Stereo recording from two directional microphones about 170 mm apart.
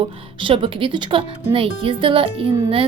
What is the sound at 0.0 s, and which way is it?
A woman's voice, 30° right (ahead or behind).